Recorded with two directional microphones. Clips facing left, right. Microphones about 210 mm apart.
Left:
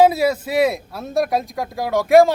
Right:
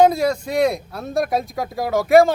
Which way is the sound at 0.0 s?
5° left (ahead or behind).